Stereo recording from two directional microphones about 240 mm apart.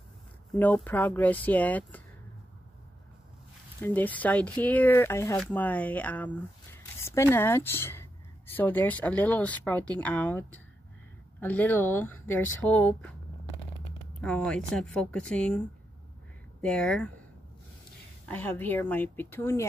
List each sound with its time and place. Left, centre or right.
0.5 s speech: centre
3.8 s speech: centre
14.2 s a woman's voice: centre
16.6 s a woman's voice: centre
18.3 s speech: centre